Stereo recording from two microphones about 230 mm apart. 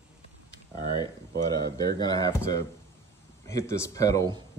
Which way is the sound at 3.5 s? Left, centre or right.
Centre.